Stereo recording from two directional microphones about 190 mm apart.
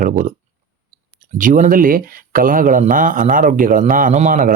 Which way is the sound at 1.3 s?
45° right (ahead or behind).